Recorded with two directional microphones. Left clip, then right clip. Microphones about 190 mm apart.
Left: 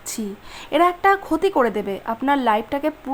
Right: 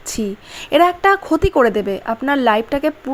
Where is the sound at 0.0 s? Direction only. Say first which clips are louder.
Right 6 dB; 15° right (ahead or behind).